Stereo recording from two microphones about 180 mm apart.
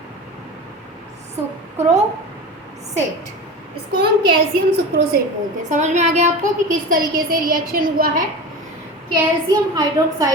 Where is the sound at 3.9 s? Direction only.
60° right (ahead or behind).